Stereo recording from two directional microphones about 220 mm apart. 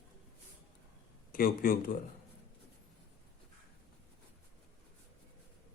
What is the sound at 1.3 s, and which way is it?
Speech, 40° left (ahead or behind).